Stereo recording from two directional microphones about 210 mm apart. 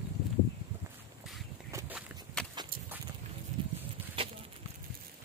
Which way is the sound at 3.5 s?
35° right (ahead or behind).